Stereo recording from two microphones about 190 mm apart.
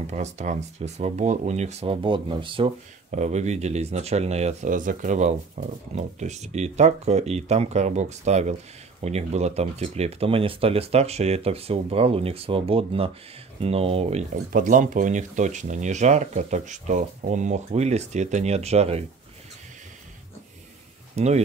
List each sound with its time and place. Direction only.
0.0 s speech: 35° right (ahead or behind)
21.2 s speech: 35° right (ahead or behind)